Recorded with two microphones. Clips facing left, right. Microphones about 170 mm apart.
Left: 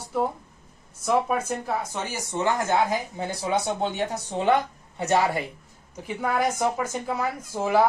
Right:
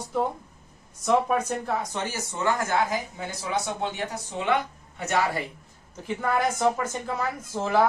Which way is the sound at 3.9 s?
35° left (ahead or behind).